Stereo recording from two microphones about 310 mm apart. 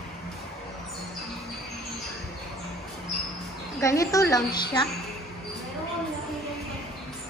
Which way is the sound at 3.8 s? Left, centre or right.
Centre.